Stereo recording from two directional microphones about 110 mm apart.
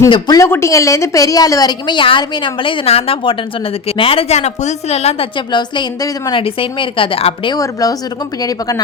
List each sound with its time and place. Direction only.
0.3 s a woman's voice: 25° left (ahead or behind); by 5.3 s 75° left (ahead or behind)
5.5 s a woman's voice: 45° left (ahead or behind)
6.3 s a woman's voice: 55° left (ahead or behind)
7.5 s a woman's voice: 35° left (ahead or behind)